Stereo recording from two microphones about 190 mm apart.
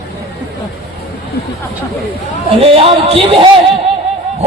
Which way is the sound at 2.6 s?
30° right (ahead or behind).